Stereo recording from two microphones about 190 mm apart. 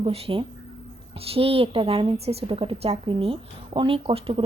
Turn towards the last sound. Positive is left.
turn(degrees=-30)  # may be behind; listen again after turning